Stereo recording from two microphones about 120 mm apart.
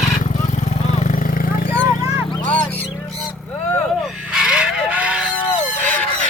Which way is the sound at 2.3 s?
15° left (ahead or behind).